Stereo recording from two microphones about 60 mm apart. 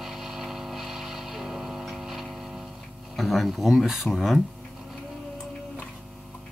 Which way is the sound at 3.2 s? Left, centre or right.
Centre.